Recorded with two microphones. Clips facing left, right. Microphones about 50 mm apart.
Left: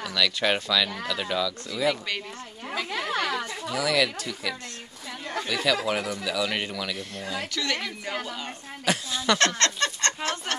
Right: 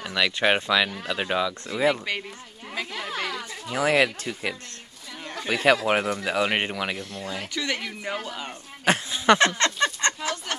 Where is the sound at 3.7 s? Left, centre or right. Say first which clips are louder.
Right 4 dB; right.